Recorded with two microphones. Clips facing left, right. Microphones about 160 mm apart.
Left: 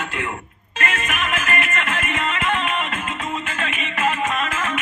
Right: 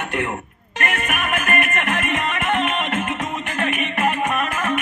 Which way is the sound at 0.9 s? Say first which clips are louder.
Right 3 dB; 60° right (ahead or behind).